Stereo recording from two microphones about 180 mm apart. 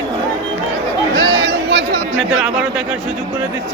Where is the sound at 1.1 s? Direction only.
90° right.